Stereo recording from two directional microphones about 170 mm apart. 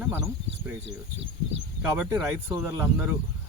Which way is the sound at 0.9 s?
90° right.